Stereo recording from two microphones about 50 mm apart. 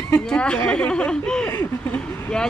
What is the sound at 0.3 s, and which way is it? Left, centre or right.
Speech, centre.